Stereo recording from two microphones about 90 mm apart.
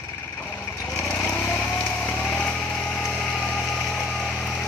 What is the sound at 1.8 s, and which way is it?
Vehicle, 15° left (ahead or behind).